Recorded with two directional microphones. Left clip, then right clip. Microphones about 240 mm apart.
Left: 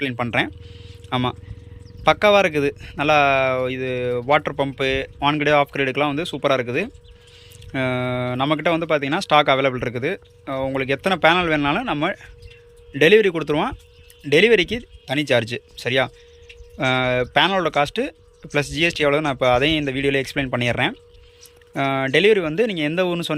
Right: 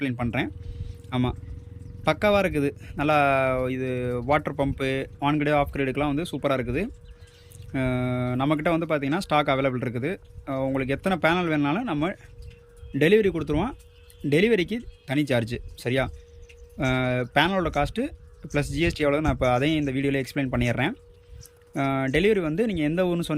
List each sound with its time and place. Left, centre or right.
0.0 s speech: centre